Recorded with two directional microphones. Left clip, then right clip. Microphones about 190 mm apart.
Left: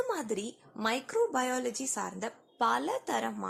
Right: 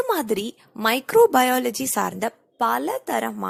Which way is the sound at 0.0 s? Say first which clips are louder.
Right 10 dB; 50° right (ahead or behind).